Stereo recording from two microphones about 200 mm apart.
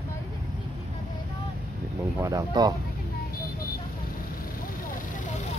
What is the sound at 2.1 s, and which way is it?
Speech, 20° right (ahead or behind).